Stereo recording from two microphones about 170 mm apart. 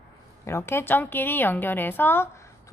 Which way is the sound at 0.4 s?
15° left (ahead or behind).